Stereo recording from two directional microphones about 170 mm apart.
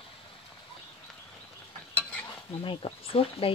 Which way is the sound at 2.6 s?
30° left (ahead or behind).